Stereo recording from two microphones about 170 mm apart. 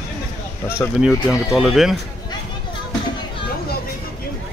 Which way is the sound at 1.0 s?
5° right (ahead or behind).